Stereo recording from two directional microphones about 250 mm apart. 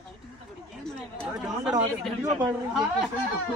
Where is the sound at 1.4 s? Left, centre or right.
Centre.